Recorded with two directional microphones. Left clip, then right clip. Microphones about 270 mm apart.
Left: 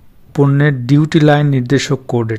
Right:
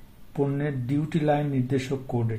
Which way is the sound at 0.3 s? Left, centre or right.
Left.